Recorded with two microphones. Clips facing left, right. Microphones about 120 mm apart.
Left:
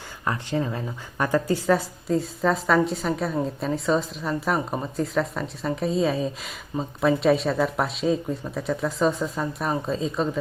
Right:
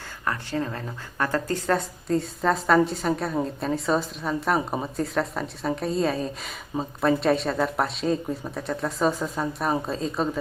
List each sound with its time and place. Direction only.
0.3 s a woman's voice: 15° left (ahead or behind); by 10.4 s centre (ahead or behind)